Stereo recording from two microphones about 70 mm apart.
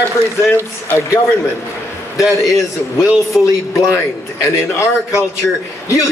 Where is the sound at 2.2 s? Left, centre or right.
Left.